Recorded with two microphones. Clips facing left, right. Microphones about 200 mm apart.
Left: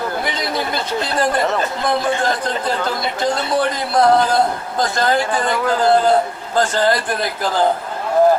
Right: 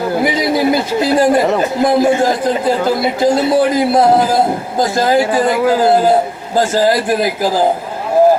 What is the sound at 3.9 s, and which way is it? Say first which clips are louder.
Speech: right 1 dB; 25° right (ahead or behind).